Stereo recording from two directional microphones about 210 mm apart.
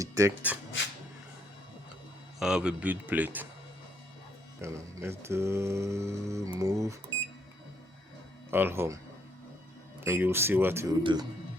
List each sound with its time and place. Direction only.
0.0 s speech: 15° right (ahead or behind)
2.4 s mantra: 5° right (ahead or behind)
4.6 s mantra: 15° right (ahead or behind)
8.4 s mantra: 10° right (ahead or behind)
10.0 s mantra: 10° right (ahead or behind)
11.0 s speech: 20° right (ahead or behind)